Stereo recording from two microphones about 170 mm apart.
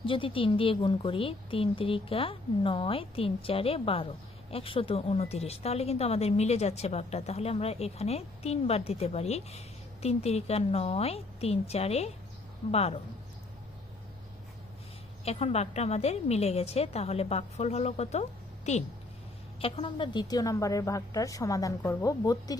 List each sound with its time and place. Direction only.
0.0 s speech: 30° left (ahead or behind)
15.2 s a woman's voice: 35° left (ahead or behind); by 22.5 s 20° left (ahead or behind)